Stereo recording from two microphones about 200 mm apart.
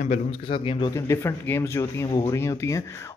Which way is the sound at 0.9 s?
15° left (ahead or behind).